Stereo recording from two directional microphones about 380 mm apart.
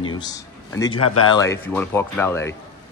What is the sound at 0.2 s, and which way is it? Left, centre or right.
Speech, centre.